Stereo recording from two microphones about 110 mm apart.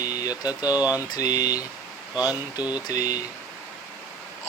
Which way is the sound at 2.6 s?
15° right (ahead or behind).